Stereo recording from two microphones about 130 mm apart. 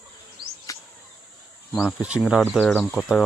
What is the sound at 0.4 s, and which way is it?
Insect, 40° right (ahead or behind).